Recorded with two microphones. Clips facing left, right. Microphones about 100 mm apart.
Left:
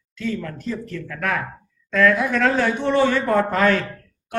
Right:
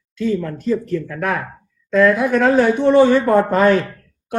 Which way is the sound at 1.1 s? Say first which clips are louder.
Right 3 dB; 20° right (ahead or behind).